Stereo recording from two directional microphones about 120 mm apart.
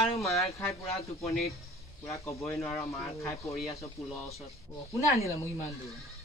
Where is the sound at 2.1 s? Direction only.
25° left (ahead or behind).